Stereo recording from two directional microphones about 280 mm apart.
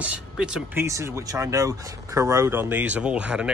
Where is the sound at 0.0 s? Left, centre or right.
Centre.